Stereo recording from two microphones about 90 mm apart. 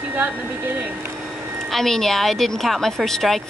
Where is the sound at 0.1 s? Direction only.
20° right (ahead or behind).